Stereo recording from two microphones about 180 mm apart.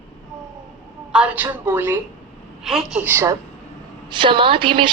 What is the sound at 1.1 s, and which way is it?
A woman's voice, 5° right (ahead or behind).